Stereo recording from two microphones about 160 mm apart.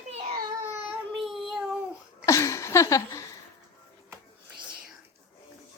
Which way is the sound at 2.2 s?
20° left (ahead or behind).